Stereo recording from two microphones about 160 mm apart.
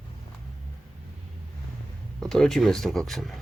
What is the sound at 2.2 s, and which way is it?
Speech, 5° left (ahead or behind).